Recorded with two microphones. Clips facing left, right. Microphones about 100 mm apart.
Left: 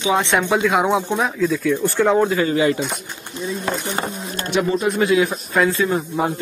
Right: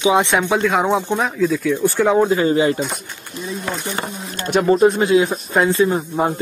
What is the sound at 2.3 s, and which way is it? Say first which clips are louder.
Speech: right 2 dB; 30° right (ahead or behind).